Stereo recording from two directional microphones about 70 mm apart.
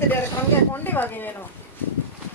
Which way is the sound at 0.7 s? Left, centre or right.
Left.